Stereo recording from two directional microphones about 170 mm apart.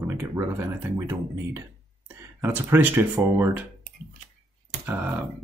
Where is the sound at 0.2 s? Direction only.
15° right (ahead or behind).